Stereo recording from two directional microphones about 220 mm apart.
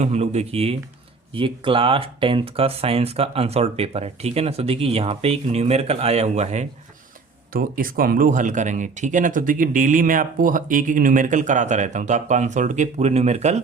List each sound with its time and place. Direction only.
0.0 s speech: 30° right (ahead or behind)
7.5 s speech: 40° right (ahead or behind)